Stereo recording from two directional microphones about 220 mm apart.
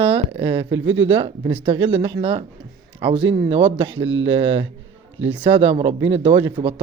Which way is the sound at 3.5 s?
25° right (ahead or behind).